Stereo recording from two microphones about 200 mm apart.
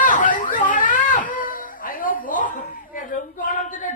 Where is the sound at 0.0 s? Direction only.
40° left (ahead or behind).